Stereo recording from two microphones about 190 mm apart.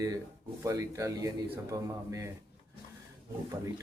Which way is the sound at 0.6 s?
15° right (ahead or behind).